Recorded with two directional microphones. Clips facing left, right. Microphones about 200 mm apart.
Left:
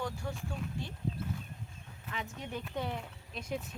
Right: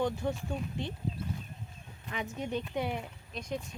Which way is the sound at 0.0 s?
20° right (ahead or behind).